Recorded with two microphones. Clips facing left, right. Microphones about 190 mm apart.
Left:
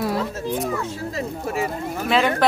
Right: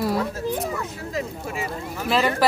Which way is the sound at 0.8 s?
30° left (ahead or behind).